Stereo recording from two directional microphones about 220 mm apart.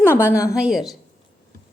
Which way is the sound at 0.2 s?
10° left (ahead or behind).